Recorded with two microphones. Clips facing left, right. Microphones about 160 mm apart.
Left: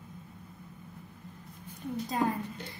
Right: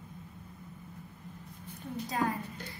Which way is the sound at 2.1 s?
20° left (ahead or behind).